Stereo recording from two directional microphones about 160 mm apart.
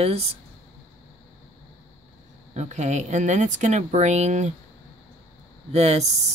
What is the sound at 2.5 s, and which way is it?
Speech, 45° right (ahead or behind).